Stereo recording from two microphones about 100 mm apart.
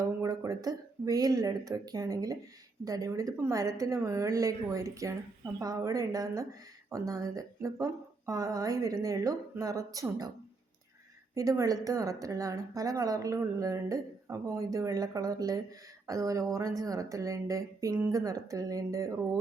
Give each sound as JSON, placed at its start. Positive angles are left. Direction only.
{"t": 0.0, "sound": "a woman's voice", "side_deg": -35}
{"t": 11.3, "sound": "a woman's voice", "side_deg": -35}